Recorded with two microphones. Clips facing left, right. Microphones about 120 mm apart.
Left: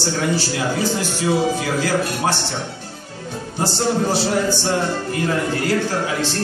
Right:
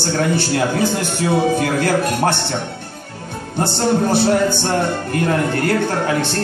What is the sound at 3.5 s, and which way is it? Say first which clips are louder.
Speech: right 3 dB; 55° right (ahead or behind).